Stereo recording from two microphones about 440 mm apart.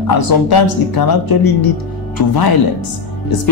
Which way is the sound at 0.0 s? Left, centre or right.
Left.